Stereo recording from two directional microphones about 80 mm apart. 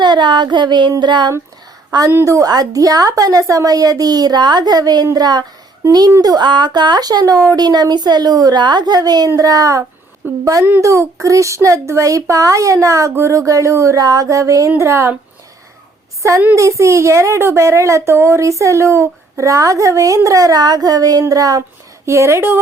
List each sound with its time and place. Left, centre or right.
0.0 s a sound: right
1.9 s a woman's voice: right
16.6 s a woman's voice: right
22.0 s a woman's voice: right